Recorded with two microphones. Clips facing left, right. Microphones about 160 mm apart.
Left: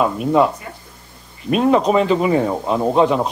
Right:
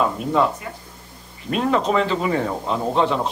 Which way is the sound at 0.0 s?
15° left (ahead or behind).